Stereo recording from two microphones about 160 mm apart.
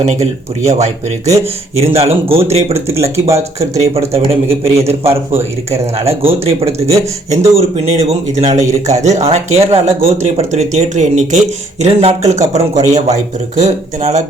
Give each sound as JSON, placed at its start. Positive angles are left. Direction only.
{"t": 0.0, "sound": "speech", "side_deg": -40}
{"t": 2.7, "sound": "speech", "side_deg": -15}
{"t": 4.1, "sound": "speech", "side_deg": -35}
{"t": 5.4, "sound": "speech", "side_deg": -15}
{"t": 6.1, "sound": "speech", "side_deg": -40}